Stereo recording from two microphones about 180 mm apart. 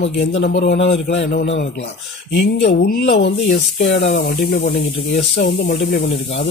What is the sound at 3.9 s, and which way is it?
Speech, 65° left (ahead or behind).